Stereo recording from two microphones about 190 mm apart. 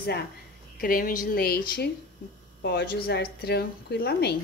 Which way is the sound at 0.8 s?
50° left (ahead or behind).